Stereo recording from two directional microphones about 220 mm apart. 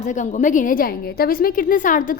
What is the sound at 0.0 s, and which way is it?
A woman's voice, 35° left (ahead or behind).